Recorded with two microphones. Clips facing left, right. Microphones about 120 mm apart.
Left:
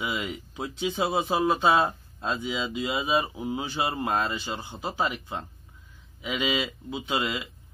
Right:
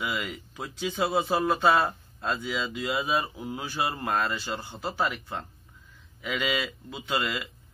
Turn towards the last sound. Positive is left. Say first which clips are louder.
# left 1 dB
turn(degrees=20)  # may be behind; listen again after turning